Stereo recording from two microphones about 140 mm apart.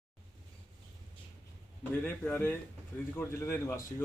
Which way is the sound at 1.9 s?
15° left (ahead or behind).